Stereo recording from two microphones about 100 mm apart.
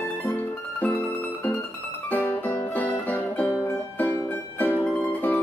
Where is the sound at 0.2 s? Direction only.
15° left (ahead or behind).